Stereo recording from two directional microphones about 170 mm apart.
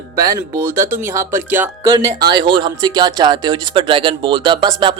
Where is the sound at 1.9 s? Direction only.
25° right (ahead or behind).